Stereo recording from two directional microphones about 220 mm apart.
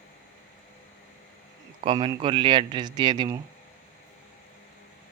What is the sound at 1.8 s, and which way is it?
Speech, 25° right (ahead or behind).